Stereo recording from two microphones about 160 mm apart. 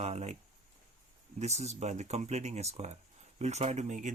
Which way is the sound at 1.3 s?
45° right (ahead or behind).